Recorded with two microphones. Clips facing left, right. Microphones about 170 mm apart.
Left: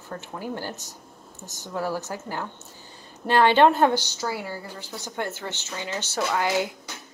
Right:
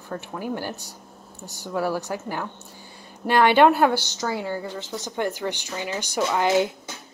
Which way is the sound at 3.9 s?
10° left (ahead or behind).